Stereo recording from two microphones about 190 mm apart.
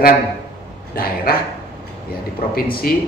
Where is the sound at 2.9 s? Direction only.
50° left (ahead or behind).